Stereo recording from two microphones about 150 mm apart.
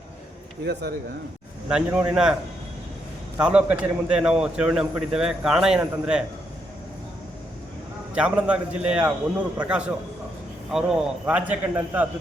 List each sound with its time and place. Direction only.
0.6 s speech: 90° right
1.7 s a man's voice: 10° right (ahead or behind)
3.3 s a man's voice: 10° right (ahead or behind)
8.1 s a man's voice: 5° right (ahead or behind)